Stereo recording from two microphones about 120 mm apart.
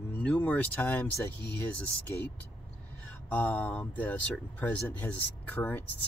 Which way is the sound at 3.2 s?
15° left (ahead or behind).